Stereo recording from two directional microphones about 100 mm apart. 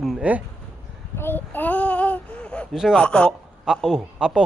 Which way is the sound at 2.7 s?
5° right (ahead or behind).